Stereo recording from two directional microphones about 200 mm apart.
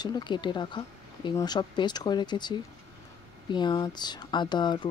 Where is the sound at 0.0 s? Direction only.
20° left (ahead or behind).